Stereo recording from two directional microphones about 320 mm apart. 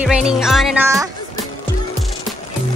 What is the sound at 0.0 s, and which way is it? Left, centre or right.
Speech, centre.